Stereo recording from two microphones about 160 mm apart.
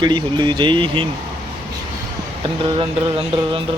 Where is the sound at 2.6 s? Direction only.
35° right (ahead or behind).